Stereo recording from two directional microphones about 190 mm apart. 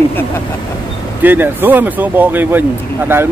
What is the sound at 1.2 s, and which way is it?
Speech, 10° right (ahead or behind).